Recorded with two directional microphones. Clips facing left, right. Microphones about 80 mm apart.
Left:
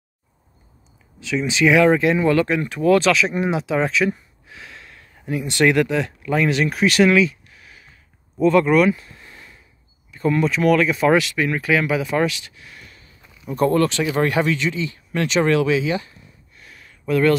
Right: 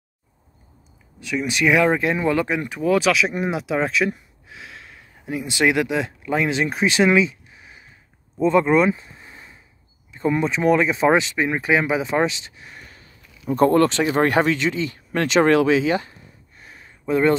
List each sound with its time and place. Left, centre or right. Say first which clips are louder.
1.3 s speech: left 2 dB; centre
8.4 s a sound: left 1 dB; right
10.1 s speech: left 2 dB; centre